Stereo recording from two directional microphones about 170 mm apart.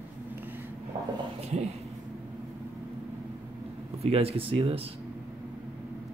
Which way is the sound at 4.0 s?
35° right (ahead or behind).